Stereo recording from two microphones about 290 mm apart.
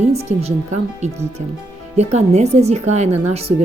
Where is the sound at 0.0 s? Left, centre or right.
Right.